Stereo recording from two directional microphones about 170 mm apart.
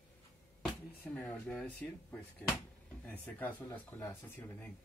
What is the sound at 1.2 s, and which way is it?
Speech, 5° left (ahead or behind).